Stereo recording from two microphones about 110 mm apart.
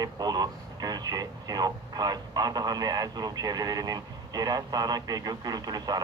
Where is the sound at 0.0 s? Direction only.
40° right (ahead or behind).